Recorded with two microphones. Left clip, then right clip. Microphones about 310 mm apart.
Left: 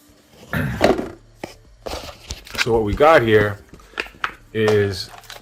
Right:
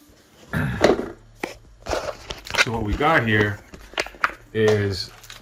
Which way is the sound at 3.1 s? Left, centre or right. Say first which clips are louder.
Left 6 dB; centre.